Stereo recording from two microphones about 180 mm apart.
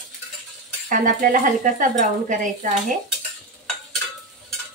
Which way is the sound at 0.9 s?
50° right (ahead or behind).